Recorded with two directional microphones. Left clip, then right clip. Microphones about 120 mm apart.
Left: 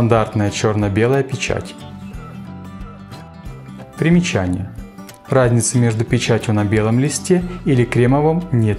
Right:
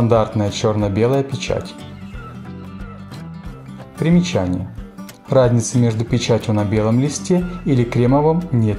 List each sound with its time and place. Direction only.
0.0 s speech: 45° left (ahead or behind)
4.0 s speech: 40° left (ahead or behind)